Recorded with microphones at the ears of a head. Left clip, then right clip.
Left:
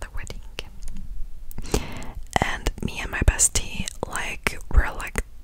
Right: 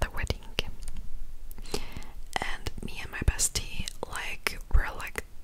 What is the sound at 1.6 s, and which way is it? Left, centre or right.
Whispering, left.